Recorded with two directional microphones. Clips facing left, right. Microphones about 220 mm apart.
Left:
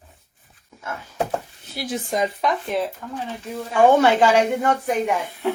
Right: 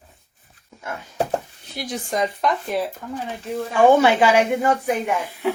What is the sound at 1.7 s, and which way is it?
Speech, 5° left (ahead or behind).